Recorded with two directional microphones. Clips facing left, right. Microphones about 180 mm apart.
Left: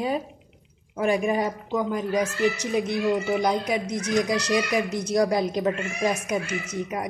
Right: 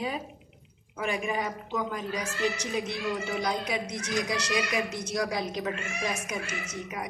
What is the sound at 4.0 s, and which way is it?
Speech, 40° left (ahead or behind).